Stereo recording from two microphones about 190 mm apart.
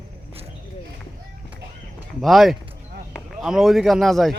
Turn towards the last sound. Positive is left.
turn(degrees=0)  # may be behind; listen again after turning